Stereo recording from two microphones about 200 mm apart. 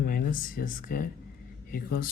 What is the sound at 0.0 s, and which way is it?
Speech, 45° left (ahead or behind).